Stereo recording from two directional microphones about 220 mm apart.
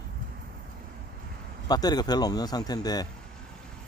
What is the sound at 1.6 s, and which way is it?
Speech, 20° left (ahead or behind).